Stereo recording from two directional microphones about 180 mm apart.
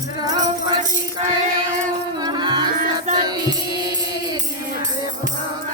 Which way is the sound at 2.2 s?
25° right (ahead or behind).